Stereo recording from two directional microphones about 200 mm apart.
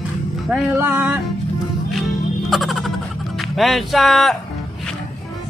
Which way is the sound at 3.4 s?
Centre (ahead or behind).